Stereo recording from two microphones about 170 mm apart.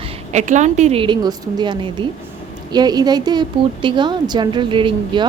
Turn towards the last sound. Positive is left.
turn(degrees=-30)  # may be behind; listen again after turning